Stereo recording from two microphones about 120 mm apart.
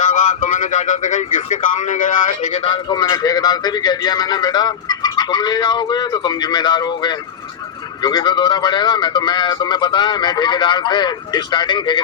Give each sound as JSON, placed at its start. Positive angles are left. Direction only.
{"t": 0.1, "sound": "speech", "side_deg": 90}
{"t": 2.6, "sound": "a man's voice", "side_deg": 35}